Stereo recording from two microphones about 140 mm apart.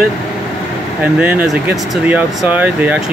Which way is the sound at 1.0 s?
10° right (ahead or behind).